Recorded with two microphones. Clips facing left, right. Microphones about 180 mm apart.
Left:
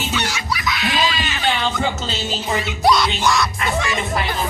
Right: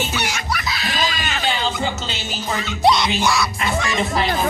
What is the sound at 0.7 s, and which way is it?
Music, 35° right (ahead or behind).